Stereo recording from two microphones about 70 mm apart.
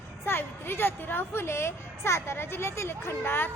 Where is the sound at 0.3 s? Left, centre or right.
Left.